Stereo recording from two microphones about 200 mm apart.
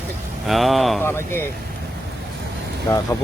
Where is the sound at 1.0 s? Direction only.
10° left (ahead or behind).